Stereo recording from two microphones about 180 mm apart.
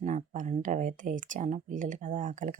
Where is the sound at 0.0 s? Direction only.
45° right (ahead or behind).